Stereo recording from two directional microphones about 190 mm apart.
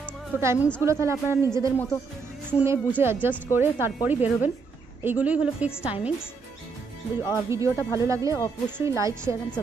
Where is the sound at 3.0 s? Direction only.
10° right (ahead or behind).